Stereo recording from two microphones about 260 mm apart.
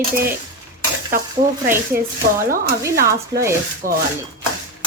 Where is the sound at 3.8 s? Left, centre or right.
Right.